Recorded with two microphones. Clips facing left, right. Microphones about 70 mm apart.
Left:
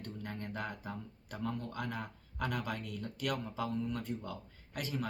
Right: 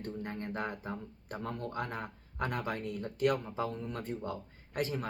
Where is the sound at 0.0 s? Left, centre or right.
Right.